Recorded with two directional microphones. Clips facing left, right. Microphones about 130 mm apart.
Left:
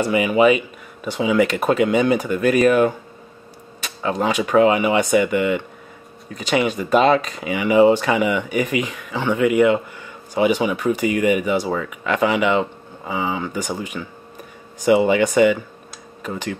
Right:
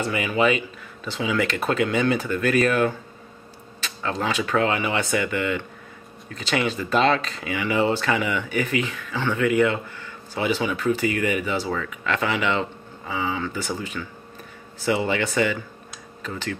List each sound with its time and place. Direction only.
0.0 s speech: 15° left (ahead or behind)